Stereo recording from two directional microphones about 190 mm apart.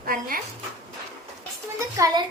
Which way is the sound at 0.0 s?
50° right (ahead or behind).